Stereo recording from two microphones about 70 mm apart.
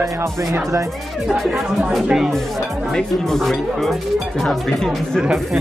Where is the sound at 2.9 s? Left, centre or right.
Centre.